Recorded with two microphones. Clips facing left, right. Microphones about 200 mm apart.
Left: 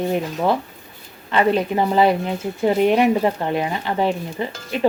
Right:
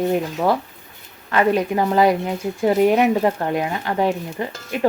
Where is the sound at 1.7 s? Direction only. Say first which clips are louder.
Even; 25° left (ahead or behind).